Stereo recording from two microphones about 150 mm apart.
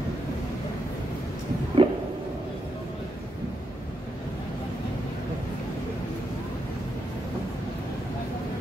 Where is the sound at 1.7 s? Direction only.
35° right (ahead or behind).